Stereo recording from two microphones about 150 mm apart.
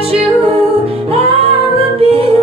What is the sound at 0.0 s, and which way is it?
Music, 40° right (ahead or behind).